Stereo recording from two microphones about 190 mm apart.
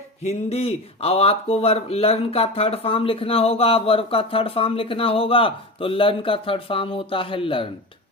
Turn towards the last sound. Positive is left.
turn(degrees=30)  # may be behind; listen again after turning